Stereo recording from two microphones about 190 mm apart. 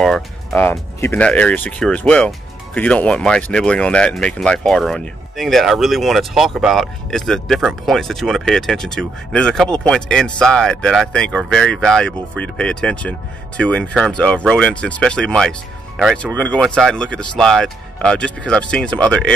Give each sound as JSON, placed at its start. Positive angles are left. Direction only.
{"t": 0.0, "sound": "speech", "side_deg": 0}